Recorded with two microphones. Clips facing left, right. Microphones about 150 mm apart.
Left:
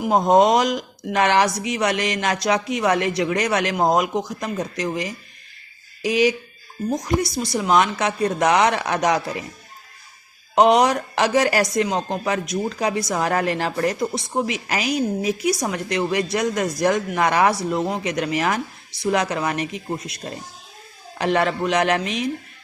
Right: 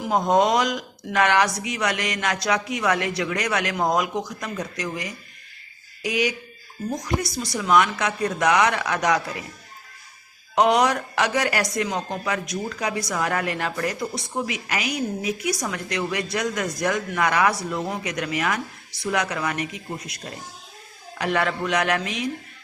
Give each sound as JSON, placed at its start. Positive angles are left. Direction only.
{"t": 0.0, "sound": "a woman's voice", "side_deg": 20}
{"t": 10.5, "sound": "a woman's voice", "side_deg": 25}
{"t": 21.2, "sound": "a woman's voice", "side_deg": 25}